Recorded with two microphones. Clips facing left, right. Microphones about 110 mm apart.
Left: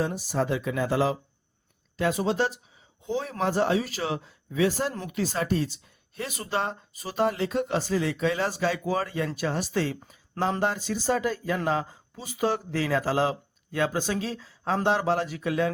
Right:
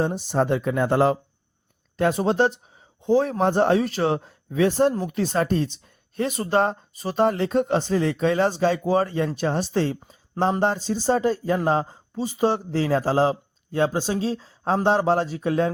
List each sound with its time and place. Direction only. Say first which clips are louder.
0.3 s speech: right 5 dB; 40° right (ahead or behind)
8.4 s speech: right 6 dB; 30° right (ahead or behind)
10.1 s a sound: right 5 dB; 30° right (ahead or behind)
11.1 s speech: right 5 dB; 35° right (ahead or behind)
12.1 s speech: right 5 dB; 25° right (ahead or behind)
12.8 s speech: right 5 dB; 40° right (ahead or behind)
13.9 s speech: right 4 dB; 25° right (ahead or behind)
14.3 s a woman's voice: right 5 dB; 40° right (ahead or behind)